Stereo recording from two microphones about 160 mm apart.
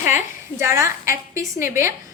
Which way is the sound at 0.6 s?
20° right (ahead or behind).